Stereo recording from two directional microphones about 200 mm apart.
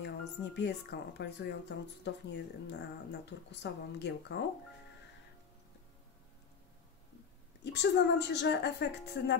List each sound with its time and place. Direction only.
0.0 s speech: 60° left (ahead or behind)
7.6 s speech: 60° left (ahead or behind)